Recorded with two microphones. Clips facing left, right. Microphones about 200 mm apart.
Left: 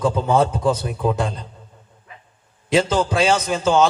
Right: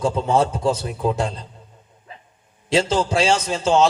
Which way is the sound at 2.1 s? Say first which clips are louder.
Right 3 dB; 30° right (ahead or behind).